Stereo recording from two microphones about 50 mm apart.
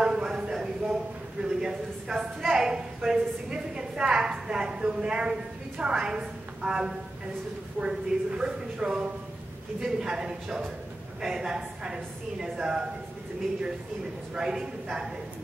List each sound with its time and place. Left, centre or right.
0.0 s a sound: centre
2.4 s a woman's voice: centre
7.8 s a woman's voice: right
8.4 s a woman's voice: centre
14.3 s a woman's voice: centre